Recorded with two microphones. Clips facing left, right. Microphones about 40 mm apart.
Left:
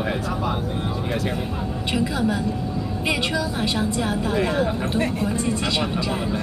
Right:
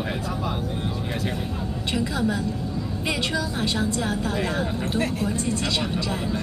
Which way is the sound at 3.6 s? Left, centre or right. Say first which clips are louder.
Left 2 dB; centre.